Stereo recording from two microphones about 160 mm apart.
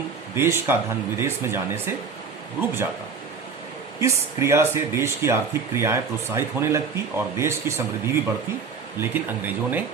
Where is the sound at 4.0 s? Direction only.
20° right (ahead or behind).